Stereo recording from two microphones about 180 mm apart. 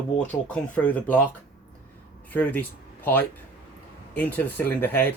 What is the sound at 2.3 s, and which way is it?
Speech, 10° left (ahead or behind).